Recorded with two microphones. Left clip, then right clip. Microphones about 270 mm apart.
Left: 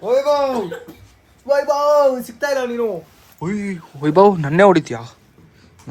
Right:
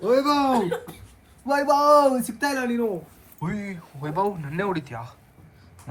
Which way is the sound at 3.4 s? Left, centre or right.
Centre.